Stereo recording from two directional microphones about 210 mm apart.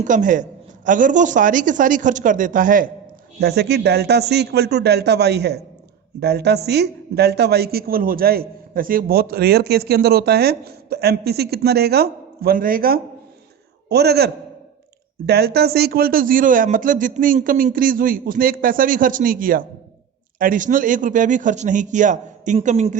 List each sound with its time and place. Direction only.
0.0 s a man's voice: 35° right (ahead or behind)
3.4 s speech: 50° right (ahead or behind)
15.3 s a man's voice: 50° right (ahead or behind); by 23.0 s 35° right (ahead or behind)